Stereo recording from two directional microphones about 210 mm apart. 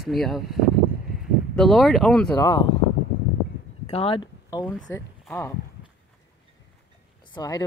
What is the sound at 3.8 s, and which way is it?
Speech, 30° left (ahead or behind).